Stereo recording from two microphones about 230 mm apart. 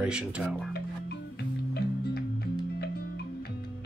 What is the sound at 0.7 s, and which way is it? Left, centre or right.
Music, left.